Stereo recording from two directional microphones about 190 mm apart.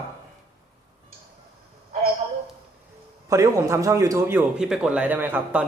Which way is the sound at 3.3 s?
15° right (ahead or behind).